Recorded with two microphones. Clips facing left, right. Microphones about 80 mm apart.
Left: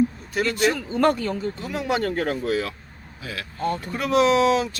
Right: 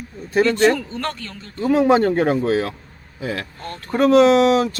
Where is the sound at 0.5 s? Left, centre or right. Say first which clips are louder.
Right 5 dB; centre.